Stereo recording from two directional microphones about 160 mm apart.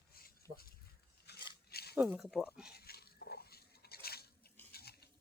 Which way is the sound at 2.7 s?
75° left (ahead or behind).